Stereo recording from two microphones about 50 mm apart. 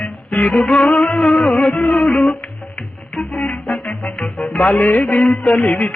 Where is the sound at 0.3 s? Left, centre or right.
Left.